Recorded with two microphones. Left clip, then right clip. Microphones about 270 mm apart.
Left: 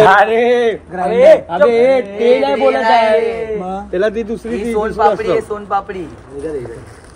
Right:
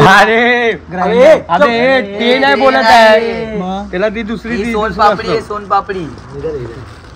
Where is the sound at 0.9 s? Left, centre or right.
Right.